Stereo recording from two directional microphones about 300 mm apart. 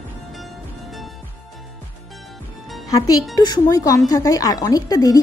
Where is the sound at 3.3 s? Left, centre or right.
Centre.